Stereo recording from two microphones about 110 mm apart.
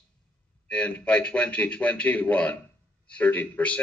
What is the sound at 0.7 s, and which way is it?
A man's voice, 10° left (ahead or behind).